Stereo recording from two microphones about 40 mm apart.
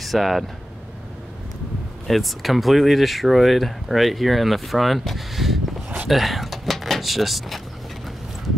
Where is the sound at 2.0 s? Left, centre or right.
Centre.